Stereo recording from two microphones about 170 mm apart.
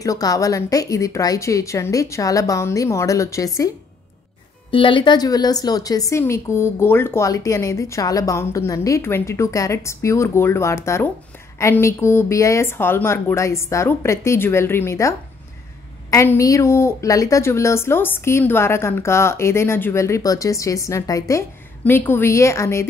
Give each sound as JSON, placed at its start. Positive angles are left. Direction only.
{"t": 0.0, "sound": "a woman's voice", "side_deg": 20}
{"t": 4.6, "sound": "a woman's voice", "side_deg": 30}